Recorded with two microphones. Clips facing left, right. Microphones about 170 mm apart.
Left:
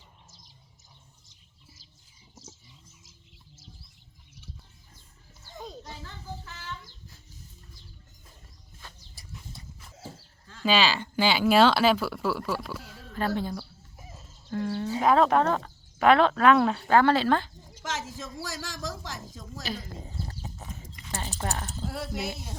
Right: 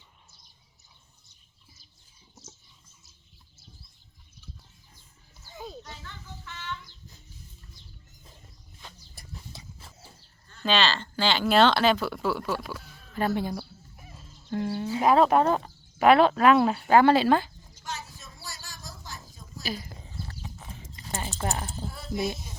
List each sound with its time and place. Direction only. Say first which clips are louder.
5.8 s children playing: left 2 dB; 30° left (ahead or behind)
9.5 s horse: right 1 dB; 90° right
10.6 s speech: left 1 dB; 10° left (ahead or behind)
13.1 s speech: right 2 dB; 10° right (ahead or behind)
13.9 s a sound: left 4 dB; 20° left (ahead or behind)
14.5 s a sound: right 1 dB; 20° right (ahead or behind)
15.0 s speech: right 1 dB; 5° right (ahead or behind)
17.8 s a sound: left 5 dB; 90° left
19.6 s speech: right 1 dB; 5° right (ahead or behind)
20.0 s horse: left 3 dB; 35° left (ahead or behind)
20.7 s horse: left 1 dB; 30° right (ahead or behind)
21.4 s speech: right 2 dB; 15° right (ahead or behind)
21.8 s speech: right 2 dB; 80° left